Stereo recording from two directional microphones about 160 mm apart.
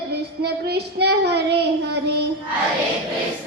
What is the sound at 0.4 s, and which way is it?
Speech, 90° right.